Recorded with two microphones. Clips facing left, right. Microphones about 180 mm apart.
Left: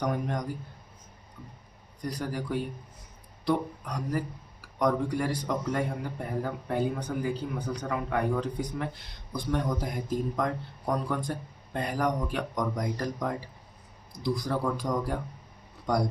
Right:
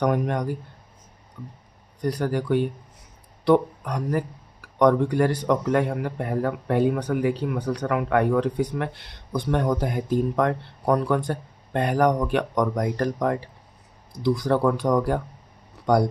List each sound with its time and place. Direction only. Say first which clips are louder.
0.0 s a man's voice: right 7 dB; 70° right (ahead or behind)
2.0 s a man's voice: right 8 dB; 70° right (ahead or behind)
9.3 s a man's voice: right 6 dB; 65° right (ahead or behind)